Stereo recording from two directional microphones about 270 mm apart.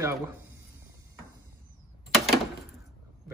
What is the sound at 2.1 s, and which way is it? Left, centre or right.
Door, centre.